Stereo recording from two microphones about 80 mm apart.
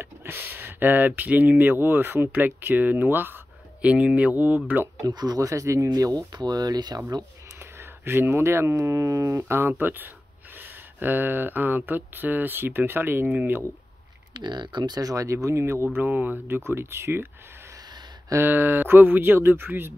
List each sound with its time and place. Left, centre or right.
0.0 s speech: right
5.0 s speech: right
5.9 s speech: right
7.5 s speech: right
14.3 s speech: right
16.0 s speech: right
18.3 s speech: right